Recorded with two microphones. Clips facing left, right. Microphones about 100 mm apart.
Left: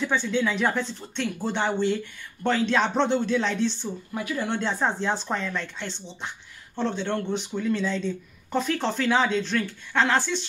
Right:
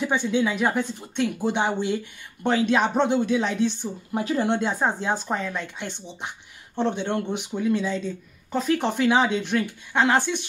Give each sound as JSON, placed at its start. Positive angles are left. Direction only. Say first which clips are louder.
{"t": 0.0, "sound": "speech", "louder": "right 2 dB", "side_deg": -15}
{"t": 4.1, "sound": "speech", "louder": "right 6 dB", "side_deg": -30}
{"t": 4.6, "sound": "speech", "louder": "right 1 dB", "side_deg": -10}
{"t": 8.7, "sound": "speech", "louder": "right 4 dB", "side_deg": -15}